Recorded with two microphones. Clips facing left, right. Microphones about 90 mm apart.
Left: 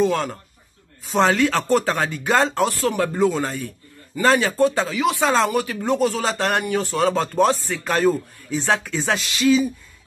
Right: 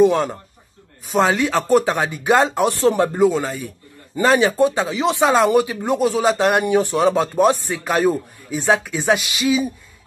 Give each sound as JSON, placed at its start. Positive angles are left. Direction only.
{"t": 0.0, "sound": "speech", "side_deg": -15}
{"t": 3.2, "sound": "speech", "side_deg": -5}
{"t": 4.2, "sound": "speech", "side_deg": -15}